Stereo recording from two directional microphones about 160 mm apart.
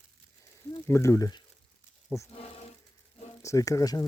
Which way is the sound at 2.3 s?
40° left (ahead or behind).